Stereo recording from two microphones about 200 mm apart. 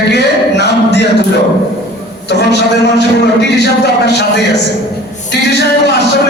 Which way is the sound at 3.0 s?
60° left (ahead or behind).